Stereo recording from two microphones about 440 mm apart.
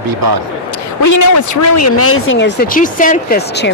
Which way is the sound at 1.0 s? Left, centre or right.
Left.